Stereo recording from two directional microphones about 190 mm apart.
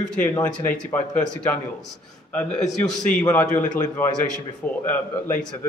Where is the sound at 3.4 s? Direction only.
40° left (ahead or behind).